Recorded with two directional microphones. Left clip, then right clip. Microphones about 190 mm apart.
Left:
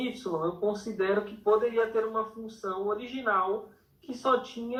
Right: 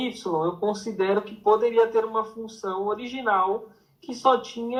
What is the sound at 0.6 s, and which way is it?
Speech, 40° right (ahead or behind).